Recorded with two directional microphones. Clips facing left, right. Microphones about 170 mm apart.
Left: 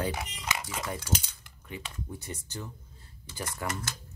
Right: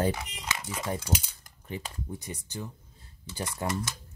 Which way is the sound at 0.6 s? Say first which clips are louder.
Right 3 dB; 20° right (ahead or behind).